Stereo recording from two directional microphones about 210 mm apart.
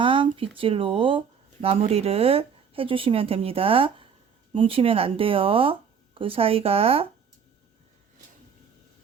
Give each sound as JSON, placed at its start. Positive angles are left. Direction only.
{"t": 0.0, "sound": "speech", "side_deg": -25}